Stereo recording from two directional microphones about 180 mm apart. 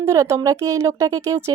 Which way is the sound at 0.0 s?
15° right (ahead or behind).